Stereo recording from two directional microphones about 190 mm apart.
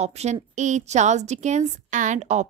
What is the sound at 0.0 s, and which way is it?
A woman's voice, 35° right (ahead or behind).